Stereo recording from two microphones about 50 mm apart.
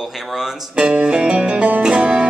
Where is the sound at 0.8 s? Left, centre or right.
Right.